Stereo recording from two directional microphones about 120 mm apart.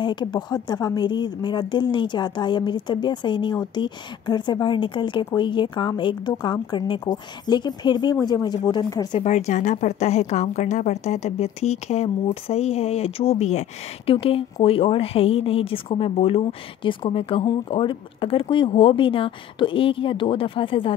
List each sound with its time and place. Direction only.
0.0 s a woman's voice: 40° left (ahead or behind)
9.2 s a woman's voice: 70° left (ahead or behind)
14.2 s a woman's voice: 50° left (ahead or behind)